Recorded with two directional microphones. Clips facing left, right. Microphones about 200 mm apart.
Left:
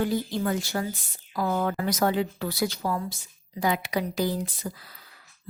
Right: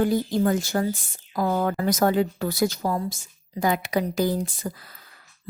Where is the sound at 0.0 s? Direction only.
45° right (ahead or behind).